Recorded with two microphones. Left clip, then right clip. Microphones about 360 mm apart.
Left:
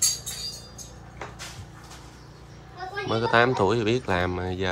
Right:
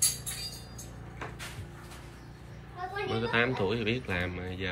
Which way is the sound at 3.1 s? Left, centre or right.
Centre.